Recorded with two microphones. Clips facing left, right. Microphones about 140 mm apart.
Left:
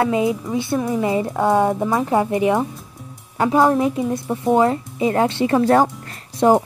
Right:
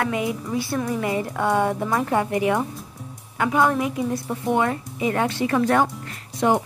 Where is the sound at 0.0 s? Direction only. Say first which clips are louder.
Left 6 dB; 25° left (ahead or behind).